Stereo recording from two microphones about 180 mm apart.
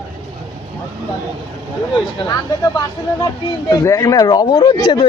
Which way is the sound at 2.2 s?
25° left (ahead or behind).